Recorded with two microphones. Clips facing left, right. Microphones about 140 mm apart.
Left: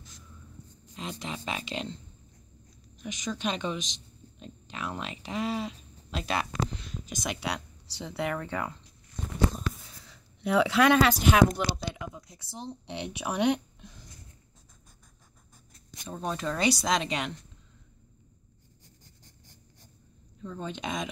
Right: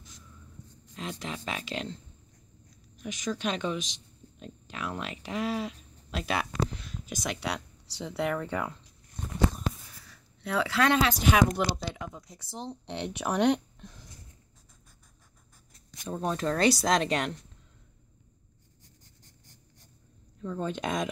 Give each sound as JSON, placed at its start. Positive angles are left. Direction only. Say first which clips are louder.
{"t": 0.9, "sound": "speech", "louder": "even", "side_deg": 0}
{"t": 3.0, "sound": "speech", "louder": "right 1 dB", "side_deg": -5}
{"t": 10.0, "sound": "a sound", "louder": "left 6 dB", "side_deg": 20}
{"t": 11.1, "sound": "speech", "louder": "left 2 dB", "side_deg": 5}
{"t": 16.0, "sound": "speech", "louder": "right 3 dB", "side_deg": -5}
{"t": 20.4, "sound": "speech", "louder": "right 4 dB", "side_deg": -5}